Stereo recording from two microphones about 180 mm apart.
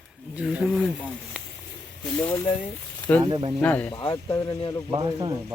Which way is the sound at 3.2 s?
25° right (ahead or behind).